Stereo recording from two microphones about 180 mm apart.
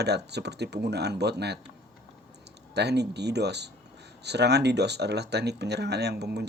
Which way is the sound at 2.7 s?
70° right (ahead or behind).